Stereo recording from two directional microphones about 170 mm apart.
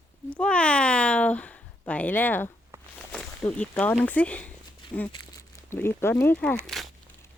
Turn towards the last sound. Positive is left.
turn(degrees=0)  # may be behind; listen again after turning